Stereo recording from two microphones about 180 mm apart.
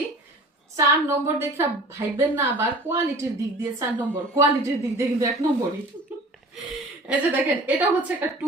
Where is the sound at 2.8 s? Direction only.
15° right (ahead or behind).